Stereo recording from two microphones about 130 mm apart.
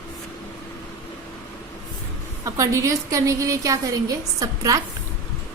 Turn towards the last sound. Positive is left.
turn(degrees=-25)  # may be behind; listen again after turning